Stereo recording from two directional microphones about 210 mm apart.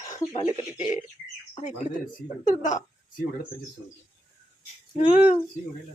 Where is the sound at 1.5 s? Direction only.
35° left (ahead or behind).